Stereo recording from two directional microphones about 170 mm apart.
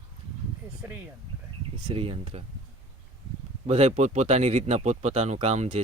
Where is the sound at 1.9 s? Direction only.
35° right (ahead or behind).